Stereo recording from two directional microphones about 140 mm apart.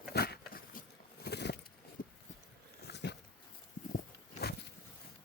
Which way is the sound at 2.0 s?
80° left.